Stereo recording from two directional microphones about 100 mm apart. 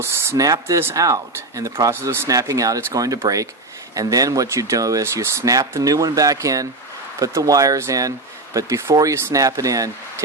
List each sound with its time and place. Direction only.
0.0 s speech: 30° right (ahead or behind)
1.9 s speech: 25° right (ahead or behind)